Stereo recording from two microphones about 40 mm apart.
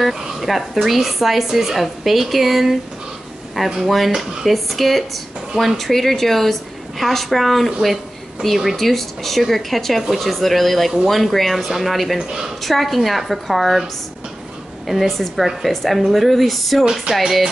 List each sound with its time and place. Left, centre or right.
0.0 s a woman's voice: centre
3.8 s a woman's voice: centre
12.2 s speech: centre
12.6 s a woman's voice: centre
14.9 s a woman's voice: centre